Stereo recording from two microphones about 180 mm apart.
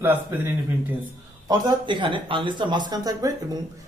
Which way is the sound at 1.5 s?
25° right (ahead or behind).